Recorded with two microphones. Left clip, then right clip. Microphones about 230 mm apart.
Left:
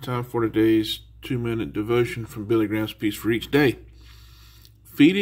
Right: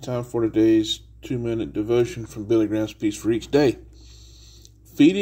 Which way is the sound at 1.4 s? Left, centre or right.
Left.